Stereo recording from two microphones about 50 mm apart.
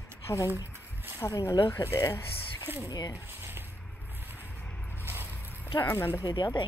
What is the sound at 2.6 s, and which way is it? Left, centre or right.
Speech, right.